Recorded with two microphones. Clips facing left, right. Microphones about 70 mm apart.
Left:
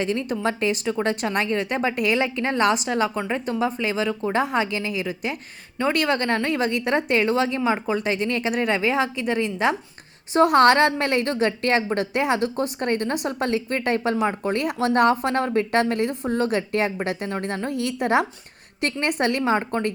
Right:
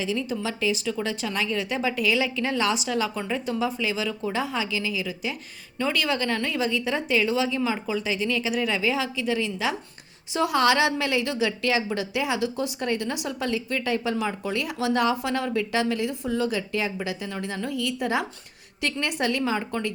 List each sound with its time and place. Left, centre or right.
0.0 s a woman's voice: left
3.2 s speech: left
3.6 s a woman's voice: left